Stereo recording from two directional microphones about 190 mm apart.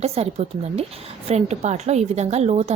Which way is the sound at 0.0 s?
35° right (ahead or behind).